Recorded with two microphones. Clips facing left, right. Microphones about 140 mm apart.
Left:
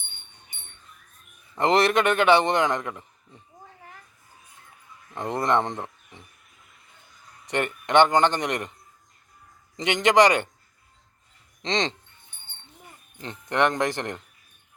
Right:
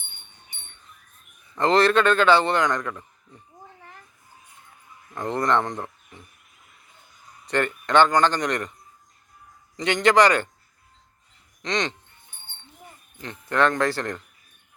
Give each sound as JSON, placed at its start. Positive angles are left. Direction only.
{"t": 1.5, "sound": "a man's voice", "side_deg": 15}
{"t": 5.1, "sound": "a man's voice", "side_deg": 25}
{"t": 7.4, "sound": "a man's voice", "side_deg": 20}
{"t": 9.7, "sound": "a man's voice", "side_deg": 20}
{"t": 11.6, "sound": "a man's voice", "side_deg": 25}
{"t": 13.2, "sound": "a man's voice", "side_deg": 20}